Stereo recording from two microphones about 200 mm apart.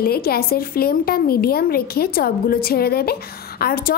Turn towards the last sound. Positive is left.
turn(degrees=50)  # may be behind; listen again after turning